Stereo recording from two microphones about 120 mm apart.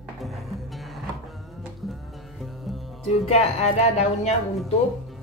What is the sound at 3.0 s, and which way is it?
Speech, 60° left (ahead or behind).